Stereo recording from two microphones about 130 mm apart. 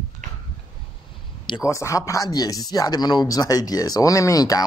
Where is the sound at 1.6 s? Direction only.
25° left (ahead or behind).